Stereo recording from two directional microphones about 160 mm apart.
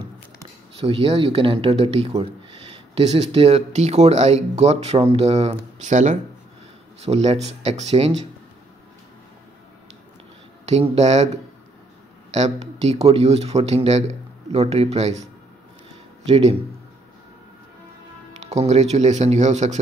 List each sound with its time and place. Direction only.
0.7 s speech: 35° right (ahead or behind)
10.6 s speech: 45° right (ahead or behind)
12.3 s speech: 45° right (ahead or behind)
16.3 s speech: 40° right (ahead or behind)
18.4 s speech: 45° right (ahead or behind)